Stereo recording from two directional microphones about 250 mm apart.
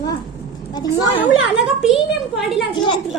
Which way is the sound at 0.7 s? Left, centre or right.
Centre.